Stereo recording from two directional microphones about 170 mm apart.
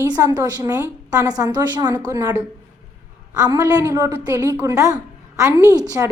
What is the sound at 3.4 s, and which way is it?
A woman's voice, 20° right (ahead or behind).